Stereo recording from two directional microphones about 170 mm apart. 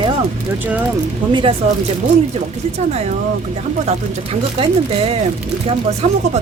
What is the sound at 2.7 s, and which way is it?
Speech, 40° right (ahead or behind).